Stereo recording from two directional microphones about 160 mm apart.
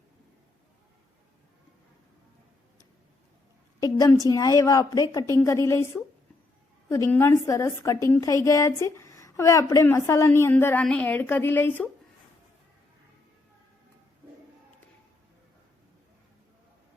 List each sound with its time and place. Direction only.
3.8 s a woman's voice: 20° left (ahead or behind)
7.1 s a woman's voice: 15° left (ahead or behind)